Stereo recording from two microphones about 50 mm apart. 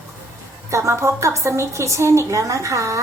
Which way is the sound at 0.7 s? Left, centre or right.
Right.